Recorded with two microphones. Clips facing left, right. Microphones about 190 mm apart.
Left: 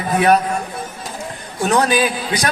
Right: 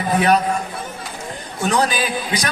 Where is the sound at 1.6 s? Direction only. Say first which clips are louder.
Left 2 dB; 45° left (ahead or behind).